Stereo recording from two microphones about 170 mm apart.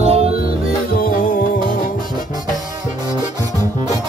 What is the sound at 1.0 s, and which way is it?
Music, 55° left (ahead or behind).